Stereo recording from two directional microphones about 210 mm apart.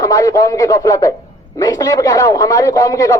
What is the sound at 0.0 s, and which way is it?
A man's voice, 15° left (ahead or behind).